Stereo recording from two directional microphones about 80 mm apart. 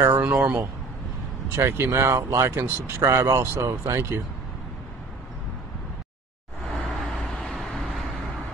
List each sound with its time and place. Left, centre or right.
0.2 s speech: right
1.5 s speech: right
6.7 s vehicle: centre